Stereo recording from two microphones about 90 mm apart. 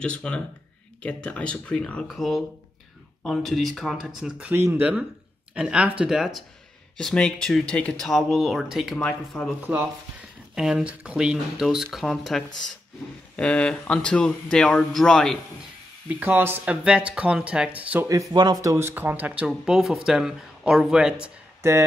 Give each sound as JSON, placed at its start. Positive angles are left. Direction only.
{"t": 0.0, "sound": "a man's voice", "side_deg": 10}
{"t": 7.0, "sound": "a man's voice", "side_deg": 5}
{"t": 8.1, "sound": "speech", "side_deg": 0}
{"t": 8.9, "sound": "a man's voice", "side_deg": 10}
{"t": 9.7, "sound": "speech", "side_deg": -20}
{"t": 10.5, "sound": "a man's voice", "side_deg": -5}
{"t": 16.1, "sound": "speech", "side_deg": -20}
{"t": 16.8, "sound": "speech", "side_deg": -10}
{"t": 18.0, "sound": "speech", "side_deg": -35}
{"t": 18.3, "sound": "speech", "side_deg": -50}
{"t": 18.6, "sound": "speech", "side_deg": -30}
{"t": 19.6, "sound": "speech", "side_deg": -5}
{"t": 21.6, "sound": "speech", "side_deg": -30}